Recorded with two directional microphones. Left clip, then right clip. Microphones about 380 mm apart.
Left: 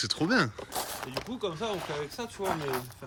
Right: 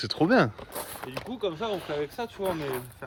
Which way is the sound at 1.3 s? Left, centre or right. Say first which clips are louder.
Right 4 dB; centre.